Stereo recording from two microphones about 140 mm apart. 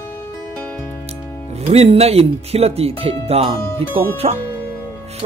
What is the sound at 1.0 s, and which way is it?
Speech, 50° right (ahead or behind).